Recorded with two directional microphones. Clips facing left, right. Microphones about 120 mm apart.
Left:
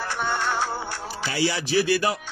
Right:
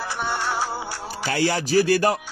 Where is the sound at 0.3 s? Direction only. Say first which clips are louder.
Even; 10° right (ahead or behind).